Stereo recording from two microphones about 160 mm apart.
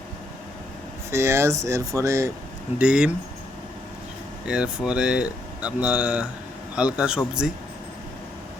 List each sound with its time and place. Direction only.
1.1 s speech: 15° right (ahead or behind)
2.7 s speech: 5° right (ahead or behind)
4.4 s speech: 5° right (ahead or behind)